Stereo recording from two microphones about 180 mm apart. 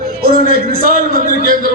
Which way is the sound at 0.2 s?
55° right (ahead or behind).